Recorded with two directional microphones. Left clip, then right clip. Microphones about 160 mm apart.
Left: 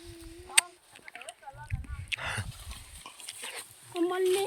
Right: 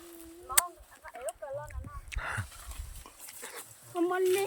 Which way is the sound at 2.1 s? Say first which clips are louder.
Left 3 dB; 25° right (ahead or behind).